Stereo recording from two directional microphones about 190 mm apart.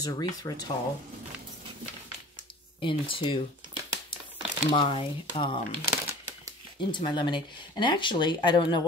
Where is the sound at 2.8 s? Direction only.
25° left (ahead or behind).